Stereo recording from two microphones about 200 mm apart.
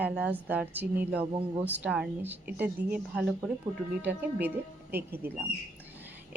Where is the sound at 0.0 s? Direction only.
10° right (ahead or behind).